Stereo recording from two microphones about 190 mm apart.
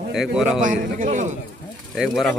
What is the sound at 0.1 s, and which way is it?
Speech, centre (ahead or behind).